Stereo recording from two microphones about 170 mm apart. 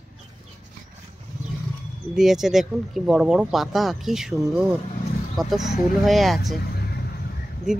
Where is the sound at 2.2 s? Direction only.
5° right (ahead or behind).